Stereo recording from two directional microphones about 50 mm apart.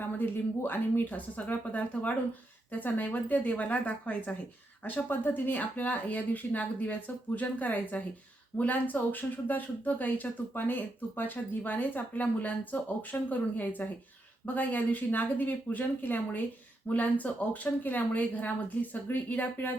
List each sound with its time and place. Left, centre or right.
0.0 s speech: left